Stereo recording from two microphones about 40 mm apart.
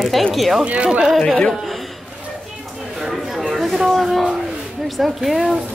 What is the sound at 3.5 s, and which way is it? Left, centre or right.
Speech, centre.